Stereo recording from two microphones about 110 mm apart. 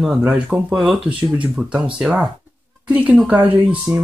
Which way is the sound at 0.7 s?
5° right (ahead or behind).